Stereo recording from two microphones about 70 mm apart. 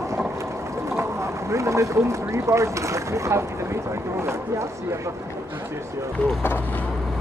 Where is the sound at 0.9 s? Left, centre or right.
Right.